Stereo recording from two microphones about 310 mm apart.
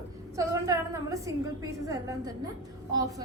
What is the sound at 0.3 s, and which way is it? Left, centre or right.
A woman's voice, centre.